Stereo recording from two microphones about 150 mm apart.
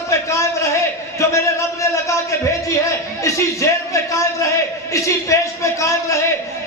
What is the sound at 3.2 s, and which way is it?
A man's voice, 20° left (ahead or behind).